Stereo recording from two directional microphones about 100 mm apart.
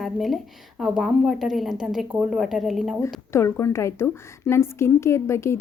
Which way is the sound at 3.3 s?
25° left (ahead or behind).